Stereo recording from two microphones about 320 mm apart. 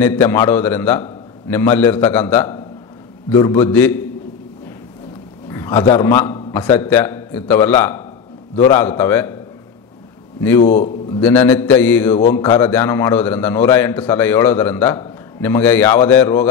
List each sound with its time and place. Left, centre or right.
0.0 s a man's voice: centre
5.5 s a sound: centre
5.9 s a man's voice: centre
10.6 s a man's voice: left
11.1 s a man's voice: centre